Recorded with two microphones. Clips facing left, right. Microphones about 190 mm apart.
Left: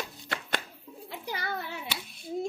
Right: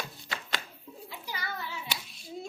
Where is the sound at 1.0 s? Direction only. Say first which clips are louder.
Left 5 dB; 60° left (ahead or behind).